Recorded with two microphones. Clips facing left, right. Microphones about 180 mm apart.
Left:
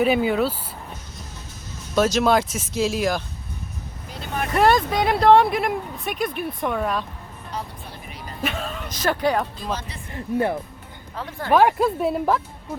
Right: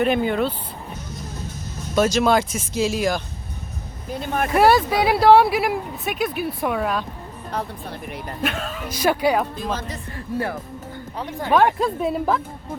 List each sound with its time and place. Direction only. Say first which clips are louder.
0.0 s speech: even; 5° left (ahead or behind)
2.0 s speech: right 1 dB; centre (ahead or behind)
4.1 s speech: right 5 dB; 50° right (ahead or behind)
4.5 s speech: right 2 dB; 10° right (ahead or behind)
8.0 s speech: right 6 dB; 60° right (ahead or behind)
8.4 s speech: right 1 dB; centre (ahead or behind)
9.7 s speech: right 3 dB; 45° right (ahead or behind)
10.2 s speech: left 4 dB; 20° left (ahead or behind)
11.2 s speech: right 1 dB; 15° right (ahead or behind)
11.5 s speech: left 1 dB; 5° left (ahead or behind)